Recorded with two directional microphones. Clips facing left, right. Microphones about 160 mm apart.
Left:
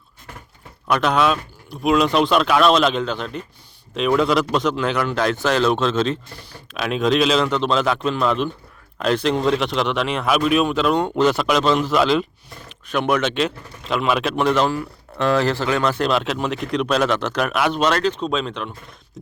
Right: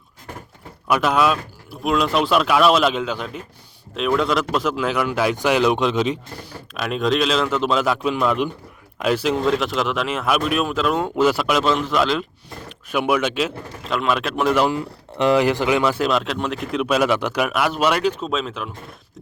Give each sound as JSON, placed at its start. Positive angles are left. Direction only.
{"t": 0.9, "sound": "speech", "side_deg": -5}
{"t": 6.7, "sound": "speech", "side_deg": 0}